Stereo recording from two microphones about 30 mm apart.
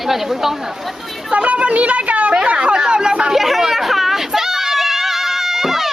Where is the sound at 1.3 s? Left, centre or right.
Right.